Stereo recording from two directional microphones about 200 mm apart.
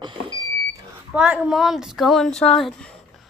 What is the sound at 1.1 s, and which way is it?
A woman's voice, 5° right (ahead or behind).